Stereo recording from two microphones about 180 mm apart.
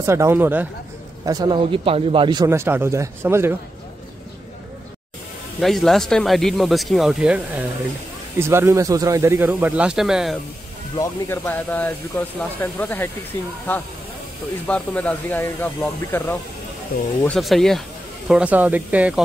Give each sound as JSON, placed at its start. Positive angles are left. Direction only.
{"t": 0.0, "sound": "speech", "side_deg": -15}
{"t": 1.2, "sound": "speech", "side_deg": -20}
{"t": 5.6, "sound": "speech", "side_deg": 0}
{"t": 11.0, "sound": "speech", "side_deg": 15}